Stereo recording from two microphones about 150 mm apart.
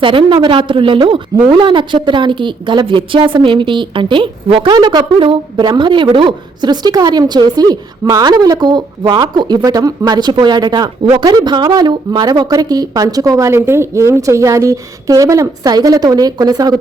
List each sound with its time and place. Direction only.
0.0 s a woman's voice: 35° right (ahead or behind)